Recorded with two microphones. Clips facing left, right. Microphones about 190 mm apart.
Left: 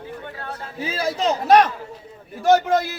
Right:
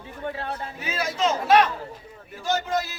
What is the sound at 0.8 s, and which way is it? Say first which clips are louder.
Speech: left 3 dB; 30° left (ahead or behind).